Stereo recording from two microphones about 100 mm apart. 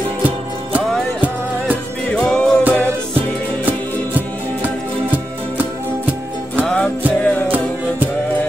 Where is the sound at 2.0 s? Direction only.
10° left (ahead or behind).